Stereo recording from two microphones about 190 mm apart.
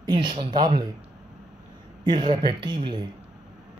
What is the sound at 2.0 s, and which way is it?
Speech, 25° right (ahead or behind).